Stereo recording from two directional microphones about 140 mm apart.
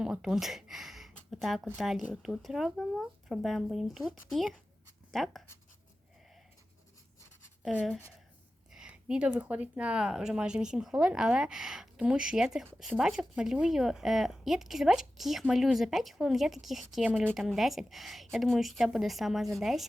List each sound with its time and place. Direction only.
0.0 s speech: 5° right (ahead or behind)
8.7 s speech: 5° right (ahead or behind)